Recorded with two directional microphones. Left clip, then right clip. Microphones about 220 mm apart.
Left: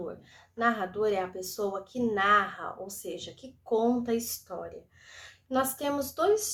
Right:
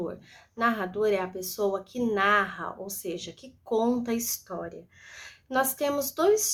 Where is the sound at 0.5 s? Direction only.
25° right (ahead or behind).